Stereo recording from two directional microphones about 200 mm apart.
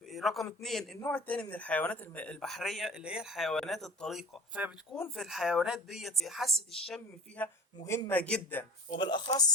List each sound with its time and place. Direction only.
0.1 s a sound: centre (ahead or behind)
0.6 s speech: centre (ahead or behind)
9.0 s speech: 20° left (ahead or behind)